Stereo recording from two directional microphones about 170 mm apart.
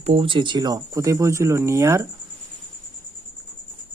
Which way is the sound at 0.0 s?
35° right (ahead or behind).